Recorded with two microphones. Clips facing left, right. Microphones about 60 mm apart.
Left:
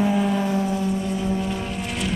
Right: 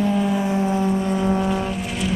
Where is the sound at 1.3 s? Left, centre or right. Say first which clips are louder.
Right 4 dB; right.